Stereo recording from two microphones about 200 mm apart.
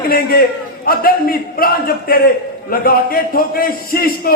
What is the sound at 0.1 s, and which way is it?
A man's voice, 50° left (ahead or behind).